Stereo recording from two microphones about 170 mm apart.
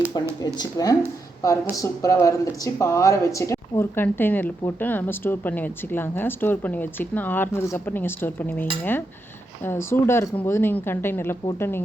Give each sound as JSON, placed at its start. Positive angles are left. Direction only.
{"t": 0.4, "sound": "speech", "side_deg": 25}